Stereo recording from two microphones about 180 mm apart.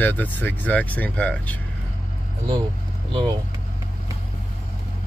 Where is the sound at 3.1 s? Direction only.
30° right (ahead or behind).